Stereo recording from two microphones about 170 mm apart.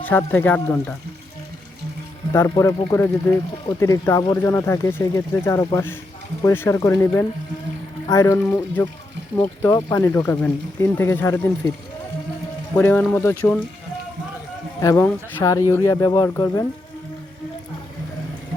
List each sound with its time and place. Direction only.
0.0 s speech: 10° left (ahead or behind)
2.3 s speech: 15° left (ahead or behind)
12.7 s speech: 10° left (ahead or behind)
14.8 s speech: 15° left (ahead or behind)